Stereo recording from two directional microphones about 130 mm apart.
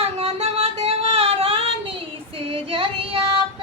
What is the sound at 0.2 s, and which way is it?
Singing, 45° right (ahead or behind).